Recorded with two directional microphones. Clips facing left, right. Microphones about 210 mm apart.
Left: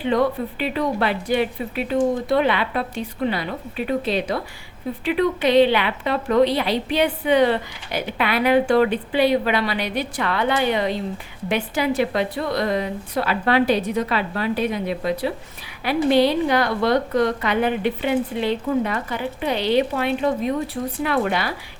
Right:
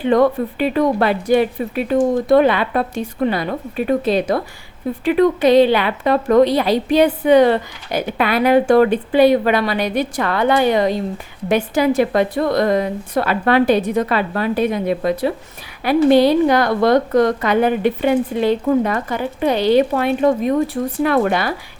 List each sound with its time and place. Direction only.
0.0 s speech: 50° right (ahead or behind)